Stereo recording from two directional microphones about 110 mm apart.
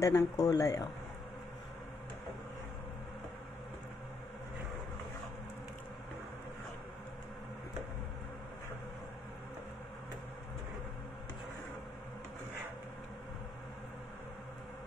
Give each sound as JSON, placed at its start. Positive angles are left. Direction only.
{"t": 0.0, "sound": "speech", "side_deg": 30}